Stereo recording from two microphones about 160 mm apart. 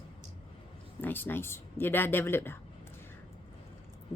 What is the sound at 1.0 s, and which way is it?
A woman's voice, 15° left (ahead or behind).